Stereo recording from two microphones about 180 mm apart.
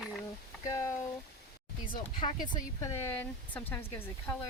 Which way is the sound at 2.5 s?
15° left (ahead or behind).